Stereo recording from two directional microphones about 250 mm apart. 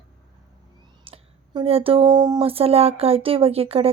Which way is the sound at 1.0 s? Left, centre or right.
Right.